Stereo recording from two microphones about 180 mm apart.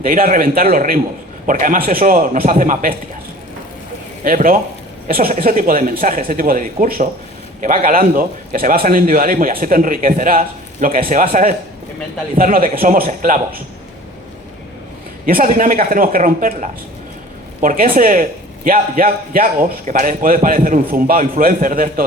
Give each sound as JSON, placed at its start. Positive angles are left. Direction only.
{"t": 0.0, "sound": "a man's voice", "side_deg": -50}
{"t": 4.2, "sound": "a man's voice", "side_deg": -50}
{"t": 15.3, "sound": "a man's voice", "side_deg": -50}